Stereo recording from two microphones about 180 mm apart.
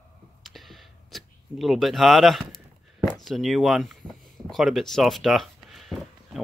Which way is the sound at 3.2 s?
Centre (ahead or behind).